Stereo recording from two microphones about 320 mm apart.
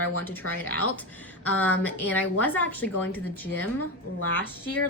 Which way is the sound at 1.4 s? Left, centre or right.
Centre.